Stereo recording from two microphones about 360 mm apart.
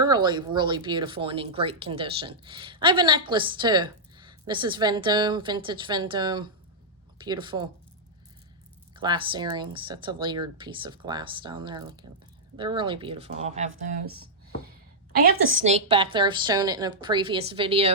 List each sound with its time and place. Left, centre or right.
0.0 s speech: centre
8.9 s speech: centre
13.7 s speech: right
15.4 s speech: centre